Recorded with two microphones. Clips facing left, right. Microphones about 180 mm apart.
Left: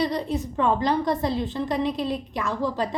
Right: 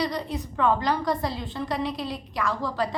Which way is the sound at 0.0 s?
25° left (ahead or behind).